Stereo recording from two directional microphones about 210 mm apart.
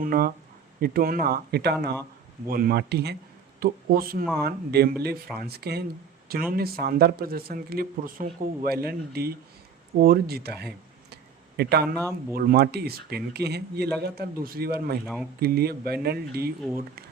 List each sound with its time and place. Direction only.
0.0 s speech: 45° right (ahead or behind)
11.1 s a sound: 50° right (ahead or behind)
12.3 s speech: 45° right (ahead or behind)
15.0 s speech: centre (ahead or behind)
15.4 s speech: 50° right (ahead or behind)